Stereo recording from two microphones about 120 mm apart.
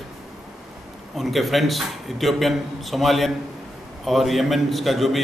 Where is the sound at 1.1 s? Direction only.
Centre (ahead or behind).